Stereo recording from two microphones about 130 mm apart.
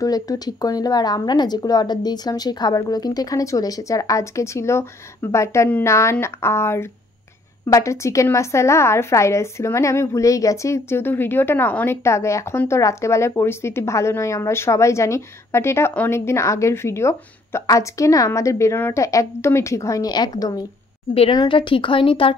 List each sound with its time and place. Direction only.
0.0 s a woman's voice: 30° left (ahead or behind)
21.1 s a woman's voice: 50° left (ahead or behind)